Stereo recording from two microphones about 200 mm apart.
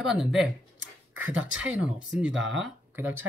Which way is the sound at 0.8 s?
75° right (ahead or behind).